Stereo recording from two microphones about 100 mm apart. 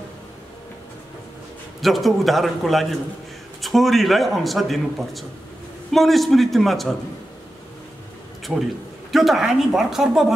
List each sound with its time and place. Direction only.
1.8 s speech: centre (ahead or behind)
8.5 s a man's voice: 15° right (ahead or behind)
9.1 s speech: centre (ahead or behind)